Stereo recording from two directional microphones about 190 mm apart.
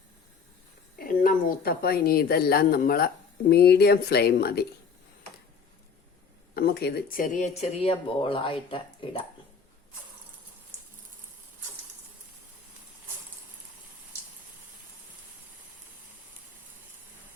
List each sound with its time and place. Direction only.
0.9 s a woman's voice: 45° left (ahead or behind)
6.5 s speech: 55° left (ahead or behind); by 8.8 s 30° left (ahead or behind)